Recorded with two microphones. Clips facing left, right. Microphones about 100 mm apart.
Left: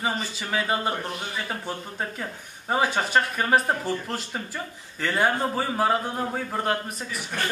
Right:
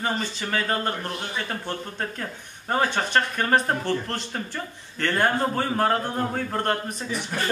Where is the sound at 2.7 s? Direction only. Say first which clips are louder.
Even; 5° left (ahead or behind).